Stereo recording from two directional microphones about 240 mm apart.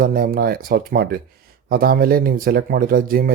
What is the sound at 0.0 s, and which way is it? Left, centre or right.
Speech, right.